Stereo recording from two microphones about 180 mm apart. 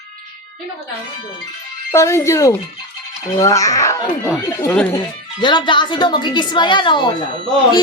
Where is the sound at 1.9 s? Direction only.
15° left (ahead or behind).